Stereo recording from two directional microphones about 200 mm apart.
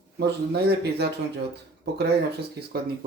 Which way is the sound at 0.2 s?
55° right (ahead or behind).